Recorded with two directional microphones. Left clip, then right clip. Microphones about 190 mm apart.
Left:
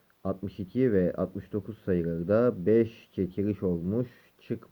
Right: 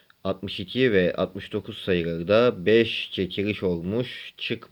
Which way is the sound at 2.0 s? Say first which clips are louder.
Right 5 dB; 30° right (ahead or behind).